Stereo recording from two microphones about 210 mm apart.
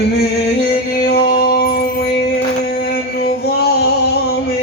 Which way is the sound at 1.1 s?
45° left (ahead or behind).